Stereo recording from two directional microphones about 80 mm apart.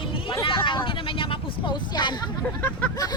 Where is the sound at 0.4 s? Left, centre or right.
Left.